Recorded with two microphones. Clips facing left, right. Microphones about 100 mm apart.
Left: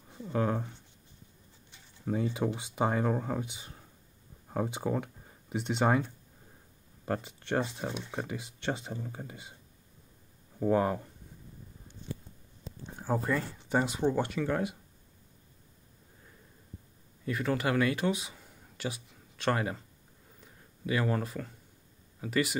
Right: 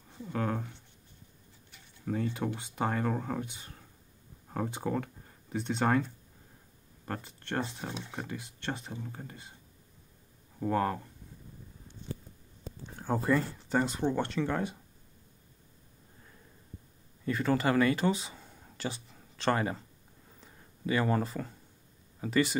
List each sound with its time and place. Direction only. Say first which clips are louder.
0.1 s speech: left 3 dB; 10° left (ahead or behind)
2.0 s speech: left 2 dB; 10° left (ahead or behind)
7.1 s speech: left 5 dB; 15° left (ahead or behind)
10.6 s speech: left 3 dB; 10° left (ahead or behind)
12.9 s speech: right 2 dB; 5° left (ahead or behind)
17.2 s speech: right 2 dB; centre (ahead or behind)
20.3 s a sound: even; centre (ahead or behind)
22.2 s speech: right 2 dB; centre (ahead or behind)